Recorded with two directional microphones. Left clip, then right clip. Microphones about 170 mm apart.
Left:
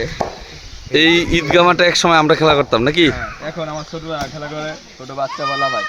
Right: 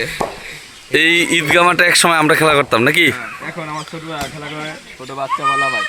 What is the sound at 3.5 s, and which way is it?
Speech, 20° left (ahead or behind).